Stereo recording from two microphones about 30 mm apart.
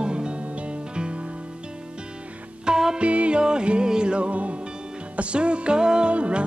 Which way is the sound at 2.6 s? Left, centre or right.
Right.